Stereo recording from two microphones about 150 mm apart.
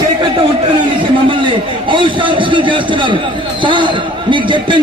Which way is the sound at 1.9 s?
35° right (ahead or behind).